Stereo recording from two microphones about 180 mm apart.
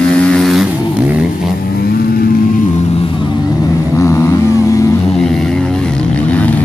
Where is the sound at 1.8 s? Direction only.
60° left (ahead or behind).